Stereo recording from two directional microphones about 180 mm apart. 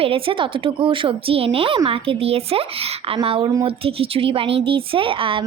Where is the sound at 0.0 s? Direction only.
30° right (ahead or behind).